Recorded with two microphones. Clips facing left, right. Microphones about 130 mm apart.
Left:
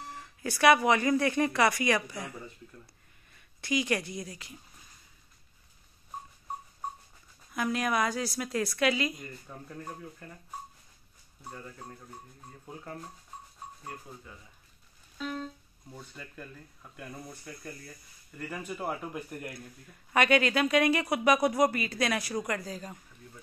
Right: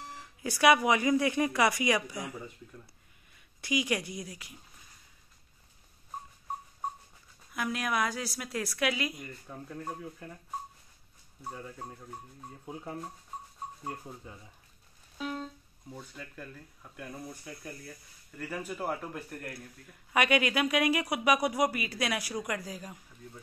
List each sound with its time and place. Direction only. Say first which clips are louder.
0.1 s speech: left 1 dB; 10° right (ahead or behind)
3.3 s speech: left 1 dB; 10° right (ahead or behind)
7.5 s speech: left 3 dB; centre (ahead or behind)
13.8 s speech: right 3 dB; 25° right (ahead or behind)
15.1 s music: even; 15° right (ahead or behind)
15.9 s speech: right 1 dB; 10° right (ahead or behind)
18.8 s speech: left 2 dB; 5° left (ahead or behind)
20.1 s speech: left 2 dB; 10° right (ahead or behind)